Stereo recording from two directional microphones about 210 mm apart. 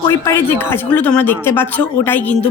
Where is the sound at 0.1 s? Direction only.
10° left (ahead or behind).